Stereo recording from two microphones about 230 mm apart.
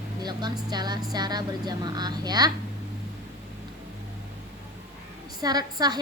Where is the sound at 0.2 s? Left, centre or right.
Centre.